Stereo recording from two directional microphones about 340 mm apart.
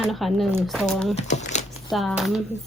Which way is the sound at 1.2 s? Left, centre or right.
Left.